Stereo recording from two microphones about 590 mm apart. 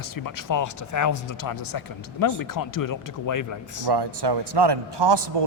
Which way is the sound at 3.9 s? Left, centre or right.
Right.